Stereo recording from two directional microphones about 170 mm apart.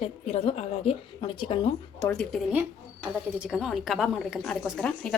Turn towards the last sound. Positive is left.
turn(degrees=5)  # may be behind; listen again after turning